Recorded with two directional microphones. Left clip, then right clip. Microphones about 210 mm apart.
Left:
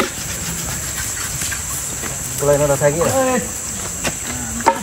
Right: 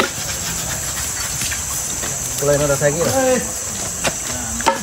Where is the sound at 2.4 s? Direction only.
20° left (ahead or behind).